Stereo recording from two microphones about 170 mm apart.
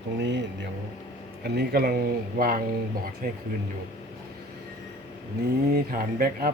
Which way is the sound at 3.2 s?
60° right (ahead or behind).